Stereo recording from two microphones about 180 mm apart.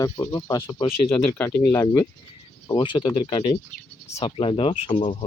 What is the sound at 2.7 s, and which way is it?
Speech, 25° left (ahead or behind).